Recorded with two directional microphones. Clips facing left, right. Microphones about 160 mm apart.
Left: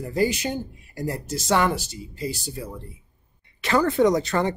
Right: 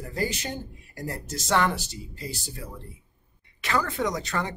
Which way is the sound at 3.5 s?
30° left (ahead or behind).